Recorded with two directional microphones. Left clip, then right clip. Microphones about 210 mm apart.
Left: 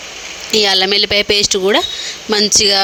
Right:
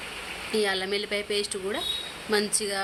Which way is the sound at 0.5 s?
40° left (ahead or behind).